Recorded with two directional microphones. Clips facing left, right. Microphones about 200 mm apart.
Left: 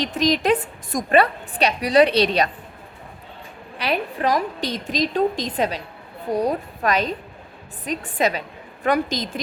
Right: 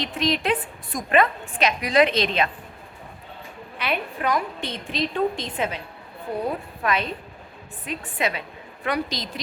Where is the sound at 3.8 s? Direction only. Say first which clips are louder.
Left 4 dB; 35° left (ahead or behind).